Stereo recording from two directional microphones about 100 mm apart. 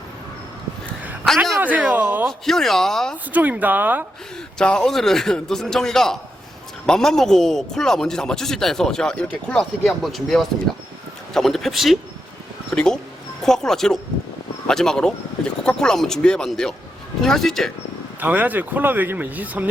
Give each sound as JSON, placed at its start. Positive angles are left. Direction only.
{"t": 1.5, "sound": "speech", "side_deg": -15}
{"t": 2.4, "sound": "speech", "side_deg": 5}
{"t": 3.3, "sound": "speech", "side_deg": -15}
{"t": 4.5, "sound": "speech", "side_deg": 10}
{"t": 18.2, "sound": "speech", "side_deg": -15}